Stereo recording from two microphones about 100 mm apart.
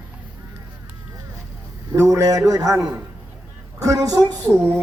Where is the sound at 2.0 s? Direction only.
30° right (ahead or behind).